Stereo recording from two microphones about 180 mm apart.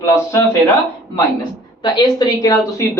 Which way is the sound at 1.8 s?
25° left (ahead or behind).